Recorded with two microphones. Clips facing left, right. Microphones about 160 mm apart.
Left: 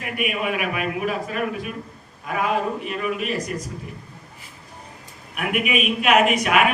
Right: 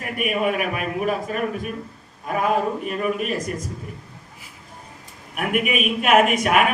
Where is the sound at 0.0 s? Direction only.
40° right (ahead or behind).